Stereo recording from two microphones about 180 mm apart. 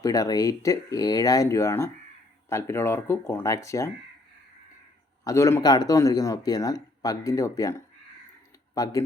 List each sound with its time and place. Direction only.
0.0 s speech: 20° left (ahead or behind)
5.2 s speech: 15° left (ahead or behind)